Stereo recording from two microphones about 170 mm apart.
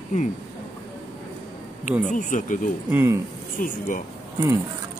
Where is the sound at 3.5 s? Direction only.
50° left (ahead or behind).